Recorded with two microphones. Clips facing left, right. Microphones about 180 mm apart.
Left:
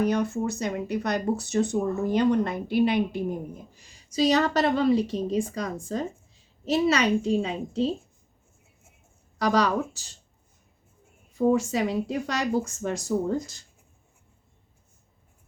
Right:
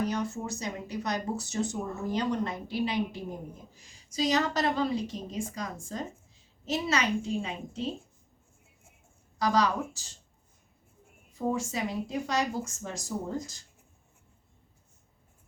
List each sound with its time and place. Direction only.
0.0 s a child's voice: 60° left (ahead or behind)
9.4 s a child's voice: 65° left (ahead or behind)
11.3 s speech: 65° left (ahead or behind)